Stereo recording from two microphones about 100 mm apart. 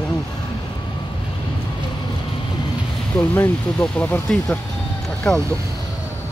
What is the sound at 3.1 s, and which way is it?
Speech, 20° left (ahead or behind).